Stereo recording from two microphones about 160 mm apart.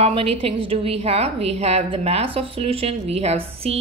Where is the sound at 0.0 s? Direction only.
40° right (ahead or behind).